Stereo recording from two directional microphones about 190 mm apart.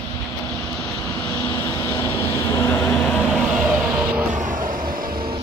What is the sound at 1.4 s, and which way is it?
Vehicle, 10° left (ahead or behind).